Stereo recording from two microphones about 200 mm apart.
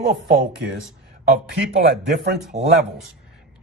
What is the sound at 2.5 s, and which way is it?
Speech, 35° right (ahead or behind).